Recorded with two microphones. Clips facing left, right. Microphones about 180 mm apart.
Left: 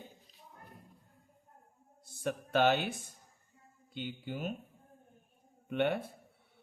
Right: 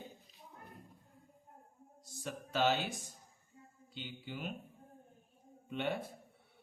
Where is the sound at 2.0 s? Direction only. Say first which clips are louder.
Left 8 dB; 60° left (ahead or behind).